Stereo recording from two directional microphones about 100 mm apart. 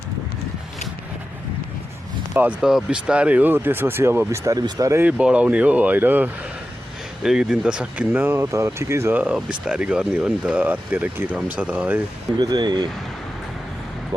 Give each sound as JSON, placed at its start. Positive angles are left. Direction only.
{"t": 2.3, "sound": "speech", "side_deg": -15}
{"t": 2.6, "sound": "speech", "side_deg": -5}
{"t": 5.0, "sound": "speech", "side_deg": -10}
{"t": 7.2, "sound": "speech", "side_deg": -5}
{"t": 8.4, "sound": "speech", "side_deg": -30}
{"t": 9.1, "sound": "speech", "side_deg": -10}
{"t": 12.4, "sound": "speech", "side_deg": -40}